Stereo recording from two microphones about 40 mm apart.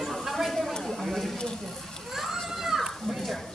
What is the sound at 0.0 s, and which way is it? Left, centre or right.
Chatter, centre.